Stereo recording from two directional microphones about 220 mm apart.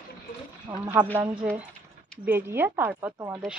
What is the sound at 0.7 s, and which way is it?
Speech, 20° right (ahead or behind).